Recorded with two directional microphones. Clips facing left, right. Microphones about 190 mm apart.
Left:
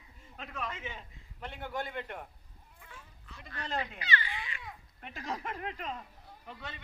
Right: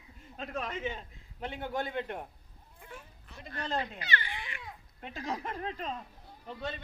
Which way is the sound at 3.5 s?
40° right (ahead or behind).